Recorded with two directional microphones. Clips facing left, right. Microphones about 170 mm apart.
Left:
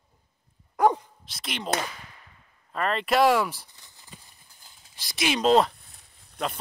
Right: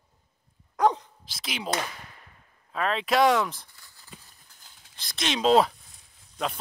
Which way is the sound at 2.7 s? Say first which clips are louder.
Left 1 dB; centre (ahead or behind).